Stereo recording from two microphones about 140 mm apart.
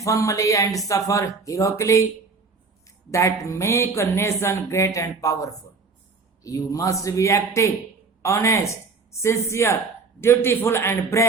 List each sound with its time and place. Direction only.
0.0 s speech: 25° left (ahead or behind)
3.1 s a man's voice: 20° left (ahead or behind)